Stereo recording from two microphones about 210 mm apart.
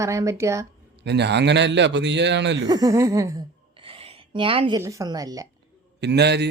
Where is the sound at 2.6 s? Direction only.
15° right (ahead or behind).